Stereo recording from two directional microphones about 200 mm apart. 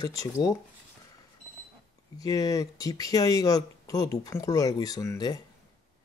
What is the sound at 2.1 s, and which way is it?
Speech, 15° left (ahead or behind).